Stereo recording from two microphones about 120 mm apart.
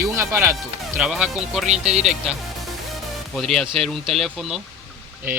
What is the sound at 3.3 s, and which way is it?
Speech, centre (ahead or behind).